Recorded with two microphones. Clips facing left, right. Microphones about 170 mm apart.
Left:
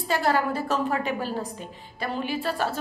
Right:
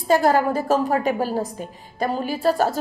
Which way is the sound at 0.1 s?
45° right (ahead or behind).